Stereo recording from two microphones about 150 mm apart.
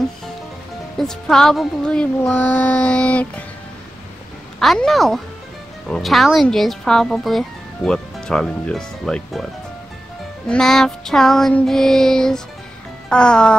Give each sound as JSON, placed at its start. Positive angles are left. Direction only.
{"t": 0.9, "sound": "music", "side_deg": 5}
{"t": 4.6, "sound": "speech", "side_deg": 0}
{"t": 10.5, "sound": "speech", "side_deg": 0}